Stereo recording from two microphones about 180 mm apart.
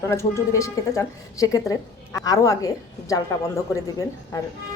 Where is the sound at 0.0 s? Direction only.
15° left (ahead or behind).